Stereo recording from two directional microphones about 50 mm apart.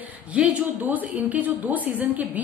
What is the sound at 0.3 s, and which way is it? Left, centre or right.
A woman's voice, right.